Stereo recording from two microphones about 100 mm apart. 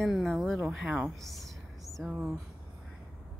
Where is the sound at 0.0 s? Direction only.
Centre (ahead or behind).